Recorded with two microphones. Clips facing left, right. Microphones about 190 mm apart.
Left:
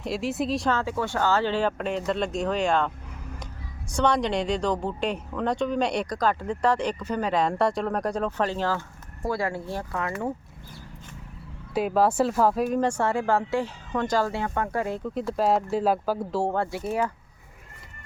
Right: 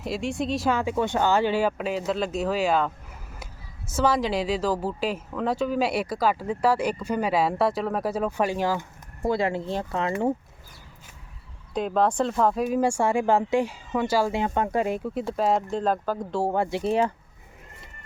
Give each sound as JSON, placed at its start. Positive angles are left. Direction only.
{"t": 0.0, "sound": "a woman's voice", "side_deg": 0}
{"t": 0.7, "sound": "a woman's voice", "side_deg": -15}
{"t": 11.7, "sound": "speech", "side_deg": 5}
{"t": 15.3, "sound": "a woman's voice", "side_deg": 0}
{"t": 16.5, "sound": "speech", "side_deg": -15}